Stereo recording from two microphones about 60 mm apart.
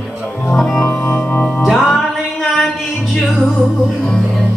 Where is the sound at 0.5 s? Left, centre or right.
Centre.